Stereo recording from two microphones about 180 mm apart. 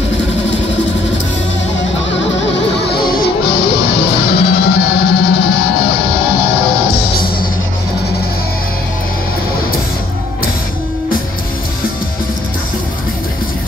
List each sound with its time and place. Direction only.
2.9 s music: 55° left (ahead or behind)